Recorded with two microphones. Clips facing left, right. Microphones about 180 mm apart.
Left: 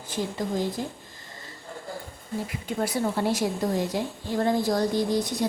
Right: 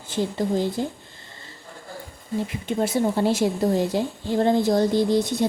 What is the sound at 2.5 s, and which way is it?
Speech, 25° right (ahead or behind).